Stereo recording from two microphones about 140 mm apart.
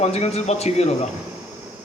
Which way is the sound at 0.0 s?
50° left (ahead or behind).